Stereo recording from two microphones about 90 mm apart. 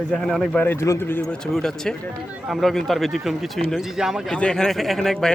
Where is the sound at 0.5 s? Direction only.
25° left (ahead or behind).